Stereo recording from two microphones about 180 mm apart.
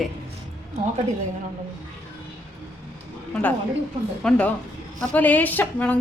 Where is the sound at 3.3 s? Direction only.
10° left (ahead or behind).